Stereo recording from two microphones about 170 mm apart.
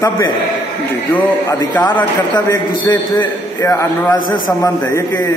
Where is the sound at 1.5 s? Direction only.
15° left (ahead or behind).